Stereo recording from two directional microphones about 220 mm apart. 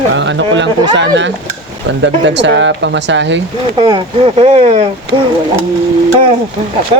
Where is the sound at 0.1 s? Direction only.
55° right (ahead or behind).